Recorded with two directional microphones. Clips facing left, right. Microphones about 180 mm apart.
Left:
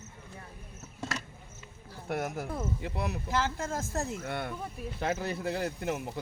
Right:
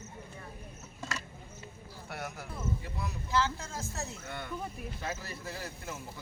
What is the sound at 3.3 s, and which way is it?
Speech, 50° left (ahead or behind).